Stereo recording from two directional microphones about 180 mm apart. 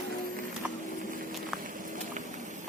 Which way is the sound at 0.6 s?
5° right (ahead or behind).